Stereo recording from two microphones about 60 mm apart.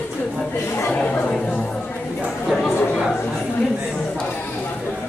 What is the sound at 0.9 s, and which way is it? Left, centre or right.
Chatter, left.